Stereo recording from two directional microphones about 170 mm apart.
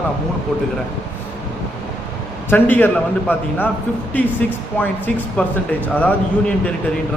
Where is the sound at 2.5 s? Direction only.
10° left (ahead or behind).